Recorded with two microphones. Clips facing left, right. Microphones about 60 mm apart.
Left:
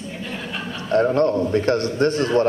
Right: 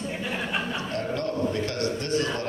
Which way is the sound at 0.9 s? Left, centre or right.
Left.